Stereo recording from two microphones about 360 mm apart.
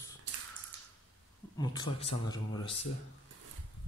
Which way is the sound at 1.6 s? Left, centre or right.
Centre.